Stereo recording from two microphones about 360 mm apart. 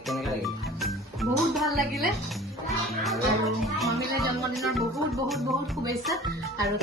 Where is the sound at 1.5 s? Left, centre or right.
Centre.